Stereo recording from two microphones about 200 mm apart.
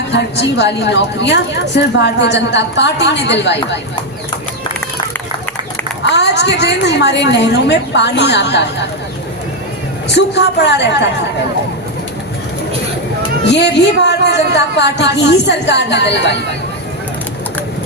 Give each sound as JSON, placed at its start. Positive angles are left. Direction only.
{"t": 0.1, "sound": "a woman's voice", "side_deg": 60}
{"t": 6.0, "sound": "a woman's voice", "side_deg": 60}
{"t": 10.1, "sound": "a woman's voice", "side_deg": 60}
{"t": 13.5, "sound": "a woman's voice", "side_deg": 60}